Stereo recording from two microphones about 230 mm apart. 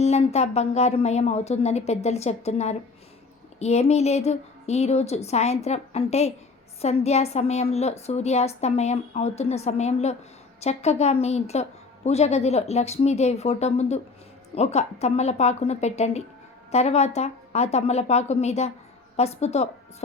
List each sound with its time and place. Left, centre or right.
0.0 s a woman's voice: left